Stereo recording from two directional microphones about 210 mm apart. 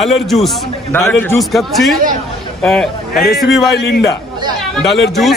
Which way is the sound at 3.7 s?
50° left (ahead or behind).